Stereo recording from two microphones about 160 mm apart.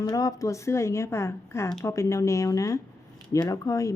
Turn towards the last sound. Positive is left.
turn(degrees=20)  # may be behind; listen again after turning